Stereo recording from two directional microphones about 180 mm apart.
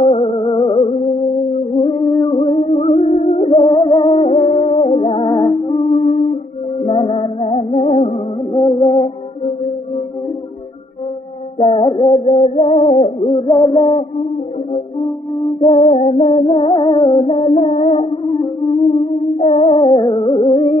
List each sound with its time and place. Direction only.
0.0 s music: 30° left (ahead or behind)
6.8 s music: 30° left (ahead or behind)
11.6 s music: 30° left (ahead or behind)
15.6 s music: 35° left (ahead or behind)
19.4 s music: 35° left (ahead or behind)